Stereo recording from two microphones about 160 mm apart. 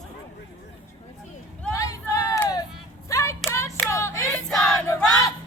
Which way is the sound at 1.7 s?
20° left (ahead or behind).